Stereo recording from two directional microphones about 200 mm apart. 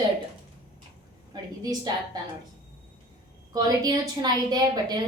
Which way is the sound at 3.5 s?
20° right (ahead or behind).